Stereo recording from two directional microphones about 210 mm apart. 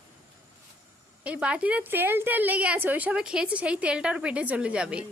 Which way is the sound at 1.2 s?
5° right (ahead or behind).